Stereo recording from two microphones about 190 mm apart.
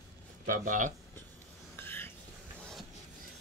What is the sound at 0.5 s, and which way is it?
Speech, 45° right (ahead or behind).